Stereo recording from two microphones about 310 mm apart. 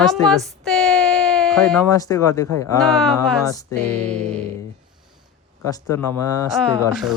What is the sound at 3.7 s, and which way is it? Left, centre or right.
Music, right.